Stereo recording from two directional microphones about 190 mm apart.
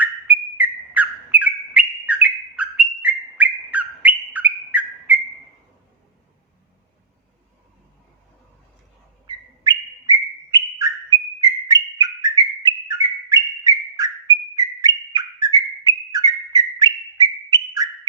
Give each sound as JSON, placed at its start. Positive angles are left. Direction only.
{"t": 0.0, "sound": "bird", "side_deg": -5}
{"t": 9.2, "sound": "bird", "side_deg": -20}